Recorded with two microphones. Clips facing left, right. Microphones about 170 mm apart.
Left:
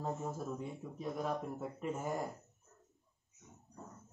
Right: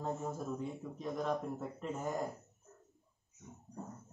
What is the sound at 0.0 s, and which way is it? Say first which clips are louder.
Speech: right 1 dB; centre (ahead or behind).